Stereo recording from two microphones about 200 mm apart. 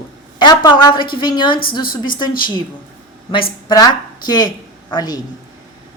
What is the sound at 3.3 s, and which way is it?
A woman's voice, 25° left (ahead or behind).